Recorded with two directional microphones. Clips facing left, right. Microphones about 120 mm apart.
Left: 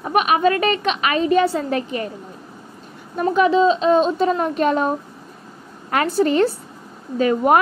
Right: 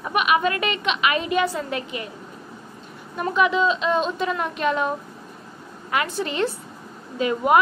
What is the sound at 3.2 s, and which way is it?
Speech, 35° left (ahead or behind).